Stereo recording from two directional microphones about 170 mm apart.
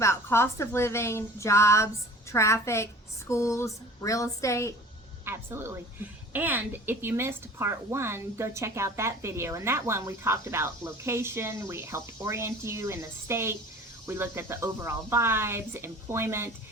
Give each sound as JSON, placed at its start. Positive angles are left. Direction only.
{"t": 0.0, "sound": "speech", "side_deg": 15}
{"t": 5.2, "sound": "a woman's voice", "side_deg": -15}